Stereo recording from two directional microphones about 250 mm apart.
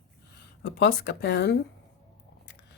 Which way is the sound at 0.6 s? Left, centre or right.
Left.